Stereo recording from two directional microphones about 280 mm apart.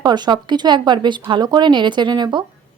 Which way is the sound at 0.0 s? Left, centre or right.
Centre.